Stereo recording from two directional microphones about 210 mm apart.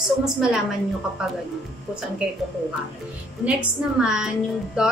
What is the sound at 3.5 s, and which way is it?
Speech, 5° right (ahead or behind).